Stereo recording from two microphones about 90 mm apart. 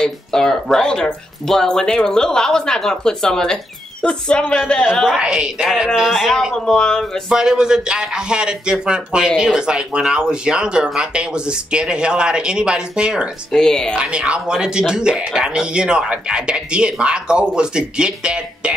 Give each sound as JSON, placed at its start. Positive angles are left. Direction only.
{"t": 0.0, "sound": "speech", "side_deg": 5}
{"t": 4.9, "sound": "speech", "side_deg": -5}
{"t": 7.2, "sound": "speech", "side_deg": -10}
{"t": 13.5, "sound": "speech", "side_deg": 5}
{"t": 13.9, "sound": "speech", "side_deg": -10}